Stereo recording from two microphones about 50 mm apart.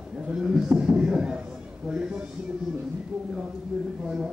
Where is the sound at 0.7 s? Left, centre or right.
Centre.